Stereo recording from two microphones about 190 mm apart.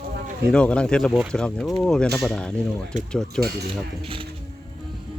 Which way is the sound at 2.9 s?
40° right (ahead or behind).